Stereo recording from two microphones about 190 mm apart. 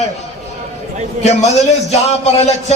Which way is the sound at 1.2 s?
35° left (ahead or behind).